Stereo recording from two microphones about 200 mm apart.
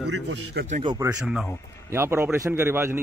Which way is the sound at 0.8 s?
20° right (ahead or behind).